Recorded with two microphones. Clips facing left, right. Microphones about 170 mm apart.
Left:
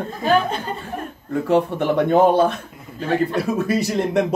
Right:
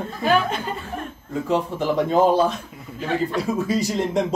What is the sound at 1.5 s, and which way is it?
Speech, 60° left (ahead or behind).